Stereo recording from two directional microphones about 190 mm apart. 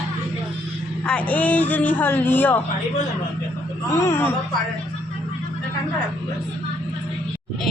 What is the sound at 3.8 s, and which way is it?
Speech, 15° left (ahead or behind).